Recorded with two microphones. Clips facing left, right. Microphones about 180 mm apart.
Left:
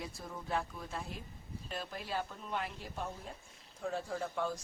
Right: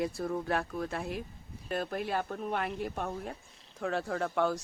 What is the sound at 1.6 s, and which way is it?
Speech, 60° right (ahead or behind).